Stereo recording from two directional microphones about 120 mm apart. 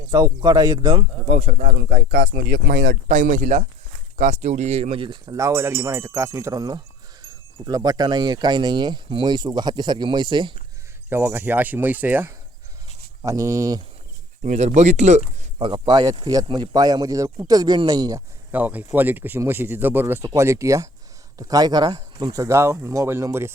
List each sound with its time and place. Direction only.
0.1 s speech: 30° right (ahead or behind)
1.3 s speech: 70° right (ahead or behind)
3.3 s speech: 90° right
4.4 s speech: 70° right (ahead or behind); by 10.5 s 40° right (ahead or behind)
11.1 s speech: 15° right (ahead or behind)
14.4 s speech: 75° right (ahead or behind)
15.5 s speech: 45° right (ahead or behind)
18.5 s speech: 15° right (ahead or behind)